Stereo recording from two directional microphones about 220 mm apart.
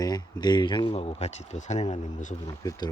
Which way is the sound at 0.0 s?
20° left (ahead or behind).